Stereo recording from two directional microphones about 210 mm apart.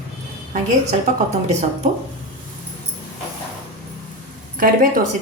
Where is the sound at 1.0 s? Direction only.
30° right (ahead or behind).